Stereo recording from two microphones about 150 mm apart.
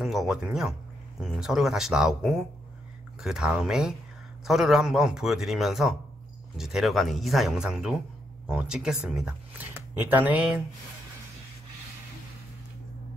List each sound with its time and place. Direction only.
0.0 s a man's voice: centre (ahead or behind)